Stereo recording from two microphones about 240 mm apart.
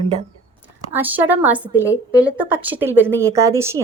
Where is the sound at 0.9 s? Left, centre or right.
Centre.